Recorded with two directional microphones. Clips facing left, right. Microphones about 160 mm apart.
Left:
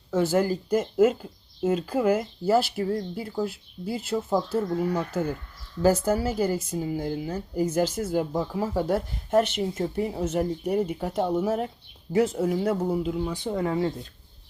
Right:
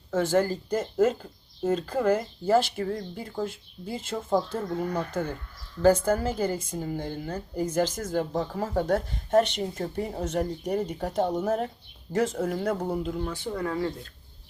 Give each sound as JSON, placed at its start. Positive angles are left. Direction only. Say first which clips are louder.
{"t": 0.1, "sound": "speech", "louder": "left 1 dB", "side_deg": 10}
{"t": 13.3, "sound": "speech", "louder": "left 3 dB", "side_deg": 20}